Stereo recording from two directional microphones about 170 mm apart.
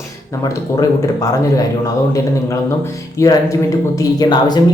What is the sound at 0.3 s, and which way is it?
Speech, 20° left (ahead or behind).